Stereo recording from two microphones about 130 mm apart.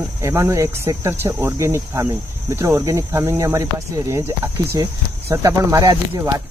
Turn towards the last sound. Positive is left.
turn(degrees=-25)  # may be behind; listen again after turning